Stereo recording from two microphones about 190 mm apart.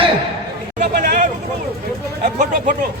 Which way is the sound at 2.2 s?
40° right (ahead or behind).